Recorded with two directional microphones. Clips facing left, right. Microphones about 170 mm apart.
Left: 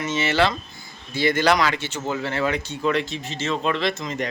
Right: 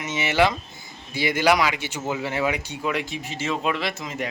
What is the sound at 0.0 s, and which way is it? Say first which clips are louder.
Speech: even; 15° right (ahead or behind).